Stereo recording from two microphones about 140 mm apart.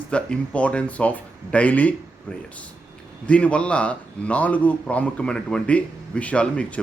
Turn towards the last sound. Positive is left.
turn(degrees=10)  # may be behind; listen again after turning